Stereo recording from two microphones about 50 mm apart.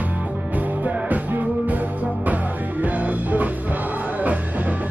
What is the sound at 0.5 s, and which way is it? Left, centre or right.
Music, right.